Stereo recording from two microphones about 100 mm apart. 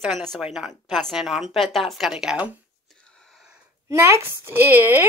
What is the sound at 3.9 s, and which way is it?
Speech, 30° right (ahead or behind).